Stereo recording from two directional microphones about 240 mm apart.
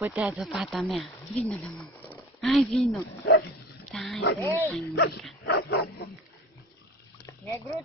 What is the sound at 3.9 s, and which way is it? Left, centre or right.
Speech, centre.